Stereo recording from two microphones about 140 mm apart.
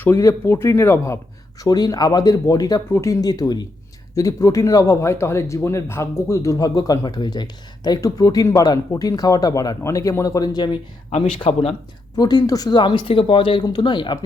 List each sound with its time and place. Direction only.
0.0 s speech: 20° left (ahead or behind)
11.5 s speech: 55° left (ahead or behind)
12.1 s speech: 30° left (ahead or behind)